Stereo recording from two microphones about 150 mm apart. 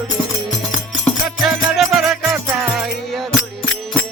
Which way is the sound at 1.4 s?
Centre (ahead or behind).